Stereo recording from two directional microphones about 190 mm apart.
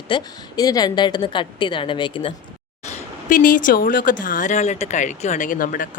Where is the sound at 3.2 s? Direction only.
45° left (ahead or behind).